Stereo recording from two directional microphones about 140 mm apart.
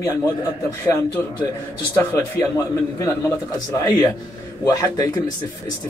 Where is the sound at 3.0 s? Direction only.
20° left (ahead or behind).